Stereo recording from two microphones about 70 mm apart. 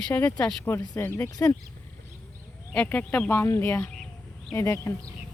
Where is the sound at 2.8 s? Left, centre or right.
Left.